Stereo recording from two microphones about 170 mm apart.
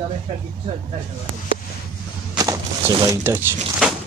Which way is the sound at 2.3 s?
20° right (ahead or behind).